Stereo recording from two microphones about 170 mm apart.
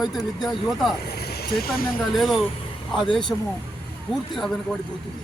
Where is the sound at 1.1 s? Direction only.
70° left (ahead or behind).